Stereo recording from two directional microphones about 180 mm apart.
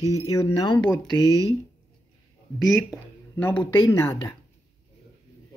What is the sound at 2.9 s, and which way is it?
Speech, 10° left (ahead or behind).